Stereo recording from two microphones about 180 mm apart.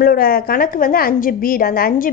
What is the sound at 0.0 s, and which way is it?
A woman's voice, 55° left (ahead or behind).